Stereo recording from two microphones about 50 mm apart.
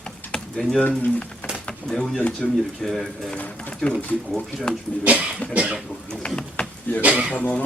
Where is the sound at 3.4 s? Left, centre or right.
Left.